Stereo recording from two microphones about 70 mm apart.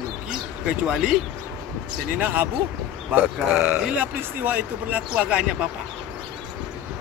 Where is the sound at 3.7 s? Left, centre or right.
Right.